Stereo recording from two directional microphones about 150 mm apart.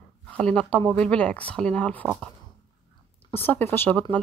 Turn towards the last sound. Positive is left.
turn(degrees=15)  # may be behind; listen again after turning